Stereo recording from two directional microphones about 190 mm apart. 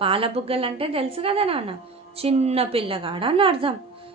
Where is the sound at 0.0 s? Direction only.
30° right (ahead or behind).